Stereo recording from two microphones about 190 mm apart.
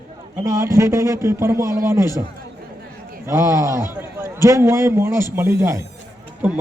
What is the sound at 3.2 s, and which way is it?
A man's voice, 15° right (ahead or behind).